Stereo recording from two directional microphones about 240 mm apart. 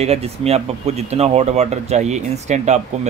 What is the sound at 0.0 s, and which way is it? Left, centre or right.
Speech, right.